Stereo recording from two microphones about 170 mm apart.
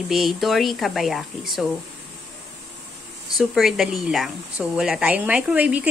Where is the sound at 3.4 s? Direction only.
Centre (ahead or behind).